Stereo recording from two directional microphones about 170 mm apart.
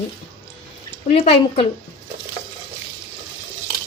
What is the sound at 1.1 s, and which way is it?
Speech, 35° left (ahead or behind).